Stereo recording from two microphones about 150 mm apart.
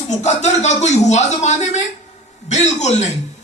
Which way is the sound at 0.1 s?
50° left (ahead or behind).